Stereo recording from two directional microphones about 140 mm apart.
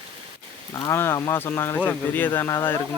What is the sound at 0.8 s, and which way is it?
Speech, 20° left (ahead or behind).